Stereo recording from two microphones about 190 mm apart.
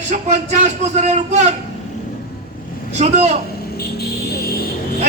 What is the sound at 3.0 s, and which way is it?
Speech, 35° right (ahead or behind).